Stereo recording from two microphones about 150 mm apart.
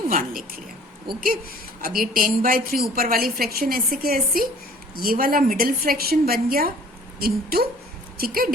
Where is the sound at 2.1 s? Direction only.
70° right (ahead or behind).